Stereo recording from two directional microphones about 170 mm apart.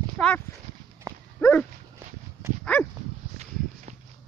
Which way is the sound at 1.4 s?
10° left (ahead or behind).